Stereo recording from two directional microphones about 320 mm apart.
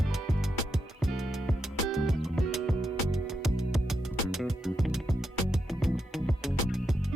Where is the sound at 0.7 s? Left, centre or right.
Centre.